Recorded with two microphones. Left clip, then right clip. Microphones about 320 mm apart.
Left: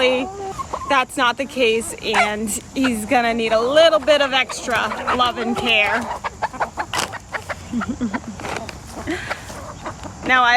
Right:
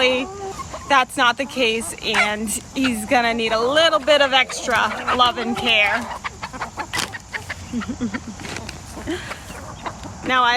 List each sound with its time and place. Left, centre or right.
0.0 s speech: centre
6.2 s chicken: centre
9.0 s a sound: centre
10.2 s speech: centre